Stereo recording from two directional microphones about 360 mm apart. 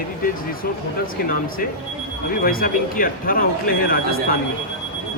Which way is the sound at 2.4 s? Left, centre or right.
Left.